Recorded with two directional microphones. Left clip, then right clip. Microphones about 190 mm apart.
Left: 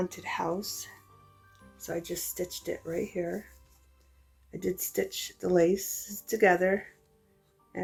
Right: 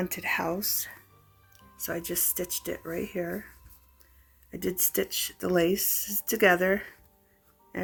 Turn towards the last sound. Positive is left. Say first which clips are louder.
# right 1 dB
turn(degrees=-35)  # may be behind; listen again after turning